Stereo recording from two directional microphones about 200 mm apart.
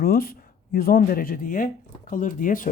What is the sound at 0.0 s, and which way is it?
Speech, 50° left (ahead or behind).